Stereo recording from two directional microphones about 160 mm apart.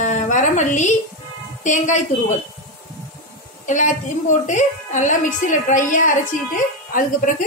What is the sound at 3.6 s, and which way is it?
A woman's voice, 50° left (ahead or behind).